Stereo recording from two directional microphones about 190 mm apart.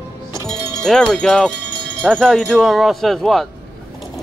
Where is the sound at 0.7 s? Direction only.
5° left (ahead or behind).